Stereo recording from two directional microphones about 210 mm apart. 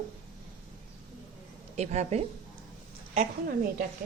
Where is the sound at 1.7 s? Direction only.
30° right (ahead or behind).